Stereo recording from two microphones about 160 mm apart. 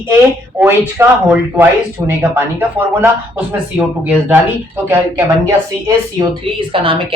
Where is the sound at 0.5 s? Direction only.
10° right (ahead or behind).